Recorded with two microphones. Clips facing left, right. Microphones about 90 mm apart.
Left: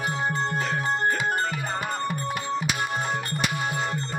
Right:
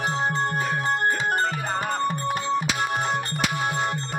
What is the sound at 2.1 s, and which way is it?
Music, 20° right (ahead or behind).